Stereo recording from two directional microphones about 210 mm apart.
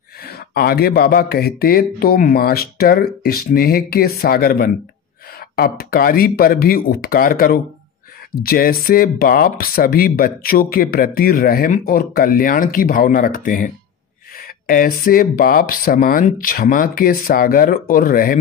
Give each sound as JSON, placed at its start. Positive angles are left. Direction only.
{"t": 0.2, "sound": "speech", "side_deg": 50}
{"t": 14.7, "sound": "speech", "side_deg": 40}